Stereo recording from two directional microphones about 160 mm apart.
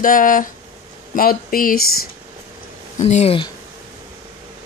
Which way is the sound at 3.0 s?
40° left (ahead or behind).